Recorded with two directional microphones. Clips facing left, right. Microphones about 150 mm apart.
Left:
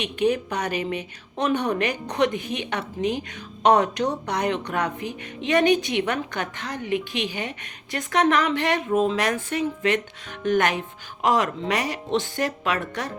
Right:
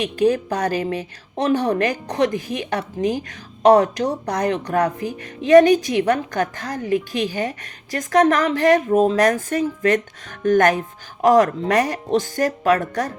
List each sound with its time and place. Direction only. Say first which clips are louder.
0.0 s a woman's voice: right 4 dB; 40° right (ahead or behind)